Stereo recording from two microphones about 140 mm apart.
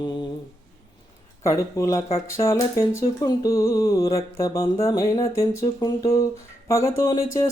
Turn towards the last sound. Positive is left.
turn(degrees=20)  # may be behind; listen again after turning